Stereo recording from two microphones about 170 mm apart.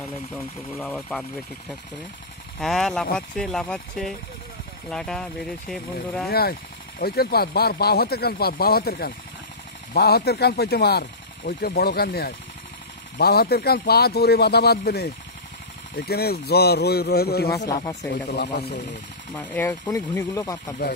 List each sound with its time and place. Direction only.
0.7 s speech: 5° left (ahead or behind)
2.6 s speech: centre (ahead or behind)
6.2 s speech: 65° left (ahead or behind)
19.3 s speech: 10° left (ahead or behind)